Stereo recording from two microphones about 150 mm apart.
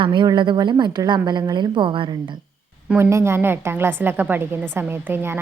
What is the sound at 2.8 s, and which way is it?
A woman's voice, 10° right (ahead or behind).